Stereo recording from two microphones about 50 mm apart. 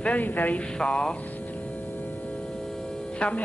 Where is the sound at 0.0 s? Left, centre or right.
Left.